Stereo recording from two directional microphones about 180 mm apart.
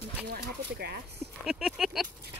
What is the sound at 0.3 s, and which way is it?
Speech, 60° right (ahead or behind).